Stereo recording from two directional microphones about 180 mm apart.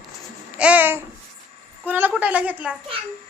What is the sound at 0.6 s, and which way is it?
Babbling, 10° right (ahead or behind).